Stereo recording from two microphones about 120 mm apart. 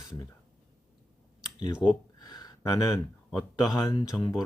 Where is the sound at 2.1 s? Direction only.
35° left (ahead or behind).